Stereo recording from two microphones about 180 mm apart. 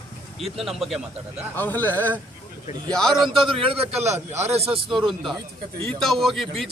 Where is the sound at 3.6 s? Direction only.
30° right (ahead or behind).